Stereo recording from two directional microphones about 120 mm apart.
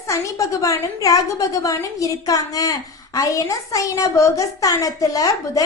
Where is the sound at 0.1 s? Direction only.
25° left (ahead or behind).